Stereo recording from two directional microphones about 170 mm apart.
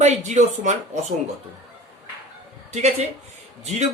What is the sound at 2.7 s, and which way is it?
Speech, 40° right (ahead or behind).